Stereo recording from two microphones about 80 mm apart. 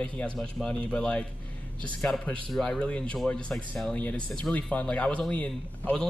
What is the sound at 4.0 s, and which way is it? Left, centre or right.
Speech, centre.